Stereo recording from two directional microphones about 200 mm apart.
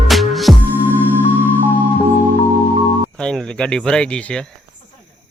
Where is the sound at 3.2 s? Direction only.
5° left (ahead or behind).